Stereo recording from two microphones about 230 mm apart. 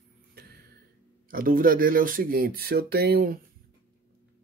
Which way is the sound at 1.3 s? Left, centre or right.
Right.